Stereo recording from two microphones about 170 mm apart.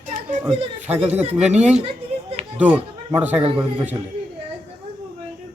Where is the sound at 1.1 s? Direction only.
10° right (ahead or behind).